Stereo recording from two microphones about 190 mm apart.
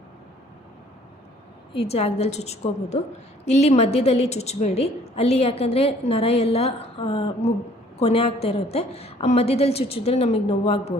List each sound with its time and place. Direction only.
1.8 s a woman's voice: 35° left (ahead or behind)